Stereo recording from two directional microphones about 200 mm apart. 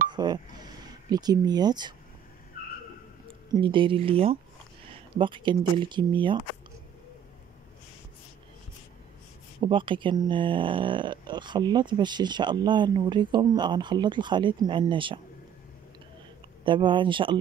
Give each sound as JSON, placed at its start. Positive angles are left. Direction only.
{"t": 0.1, "sound": "speech", "side_deg": -20}
{"t": 3.5, "sound": "speech", "side_deg": -25}
{"t": 9.6, "sound": "speech", "side_deg": -25}
{"t": 16.6, "sound": "speech", "side_deg": -25}